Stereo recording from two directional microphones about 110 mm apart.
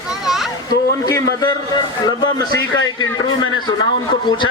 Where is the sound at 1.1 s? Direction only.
40° left (ahead or behind).